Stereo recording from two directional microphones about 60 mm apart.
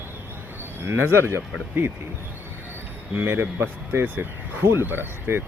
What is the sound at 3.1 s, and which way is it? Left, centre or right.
Speech, right.